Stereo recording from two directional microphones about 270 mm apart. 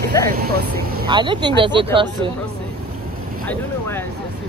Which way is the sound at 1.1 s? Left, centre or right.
Centre.